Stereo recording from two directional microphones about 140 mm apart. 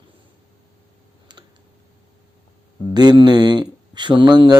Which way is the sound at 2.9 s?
30° right (ahead or behind).